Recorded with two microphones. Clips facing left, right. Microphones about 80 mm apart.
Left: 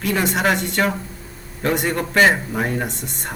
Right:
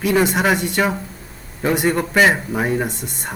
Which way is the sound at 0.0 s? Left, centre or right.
Centre.